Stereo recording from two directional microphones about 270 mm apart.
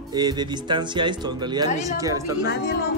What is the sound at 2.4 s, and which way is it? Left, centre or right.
Speech, left.